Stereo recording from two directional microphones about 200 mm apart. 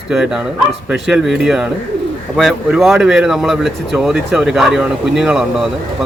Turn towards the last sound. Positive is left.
turn(degrees=0)  # may be behind; listen again after turning